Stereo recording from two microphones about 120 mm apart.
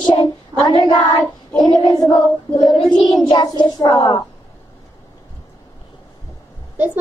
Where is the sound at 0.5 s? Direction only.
35° right (ahead or behind).